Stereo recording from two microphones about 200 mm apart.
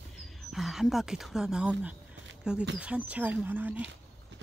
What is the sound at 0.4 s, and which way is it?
Speech, centre (ahead or behind).